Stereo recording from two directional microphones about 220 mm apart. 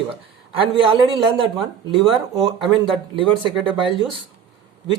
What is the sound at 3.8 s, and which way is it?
Speech, 25° right (ahead or behind).